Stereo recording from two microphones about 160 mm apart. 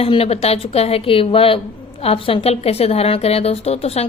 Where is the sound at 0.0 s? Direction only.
40° left (ahead or behind).